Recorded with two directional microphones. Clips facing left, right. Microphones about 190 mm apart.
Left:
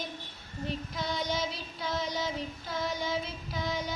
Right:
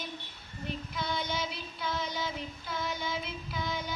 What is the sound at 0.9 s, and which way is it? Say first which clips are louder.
Child singing: left 1 dB; 40° left (ahead or behind).